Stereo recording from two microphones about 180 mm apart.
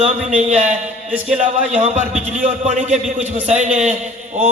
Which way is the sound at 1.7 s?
40° right (ahead or behind).